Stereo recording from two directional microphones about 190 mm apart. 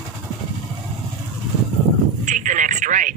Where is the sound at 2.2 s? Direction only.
40° right (ahead or behind).